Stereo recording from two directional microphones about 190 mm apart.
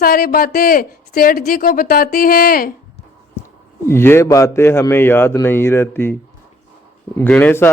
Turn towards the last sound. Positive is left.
turn(degrees=10)  # may be behind; listen again after turning